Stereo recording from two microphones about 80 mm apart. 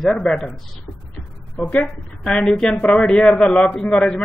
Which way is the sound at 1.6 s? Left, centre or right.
Centre.